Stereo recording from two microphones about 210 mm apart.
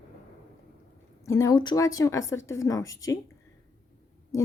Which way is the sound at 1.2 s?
15° left (ahead or behind).